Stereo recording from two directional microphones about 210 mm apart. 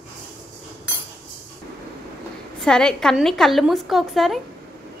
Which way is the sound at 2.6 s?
5° left (ahead or behind).